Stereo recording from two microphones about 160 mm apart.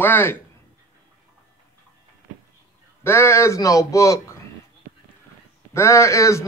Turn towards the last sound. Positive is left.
turn(degrees=20)  # may be behind; listen again after turning